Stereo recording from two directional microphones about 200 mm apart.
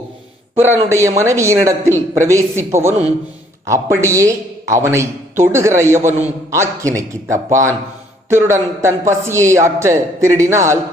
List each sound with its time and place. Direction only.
0.5 s a man's voice: 10° right (ahead or behind)
6.1 s a man's voice: 35° right (ahead or behind)
6.5 s a man's voice: 15° right (ahead or behind)